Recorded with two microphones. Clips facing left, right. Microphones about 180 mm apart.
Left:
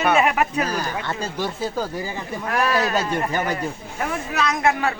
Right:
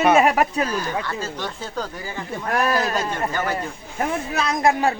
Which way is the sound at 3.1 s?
15° left (ahead or behind).